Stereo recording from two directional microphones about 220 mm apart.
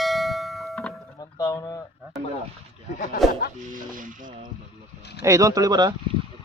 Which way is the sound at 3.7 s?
35° right (ahead or behind).